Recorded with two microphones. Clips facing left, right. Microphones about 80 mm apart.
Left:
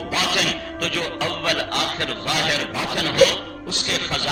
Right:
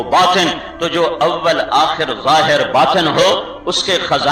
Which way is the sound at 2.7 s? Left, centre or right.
Right.